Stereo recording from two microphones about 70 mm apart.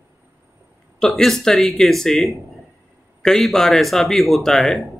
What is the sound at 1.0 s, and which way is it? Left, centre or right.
Speech, centre.